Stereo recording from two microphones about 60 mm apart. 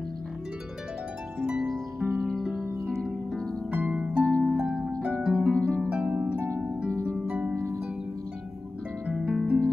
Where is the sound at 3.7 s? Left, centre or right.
Centre.